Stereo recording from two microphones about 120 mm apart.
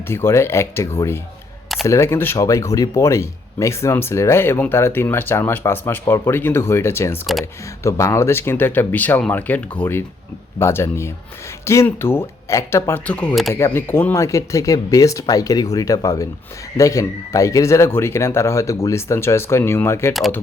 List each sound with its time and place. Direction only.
0.1 s speech: 20° left (ahead or behind); by 13.5 s 5° left (ahead or behind)
13.7 s speech: 20° left (ahead or behind)